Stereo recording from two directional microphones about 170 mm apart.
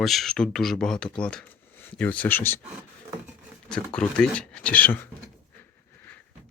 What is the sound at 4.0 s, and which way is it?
Speech, 5° left (ahead or behind).